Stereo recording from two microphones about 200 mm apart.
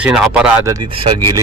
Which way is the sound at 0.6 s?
20° right (ahead or behind).